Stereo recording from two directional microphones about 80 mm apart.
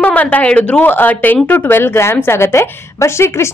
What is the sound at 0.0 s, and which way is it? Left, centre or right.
Speech, centre.